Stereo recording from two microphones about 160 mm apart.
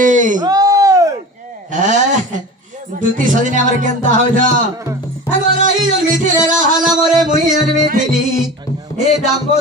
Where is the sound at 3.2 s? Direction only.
55° right (ahead or behind).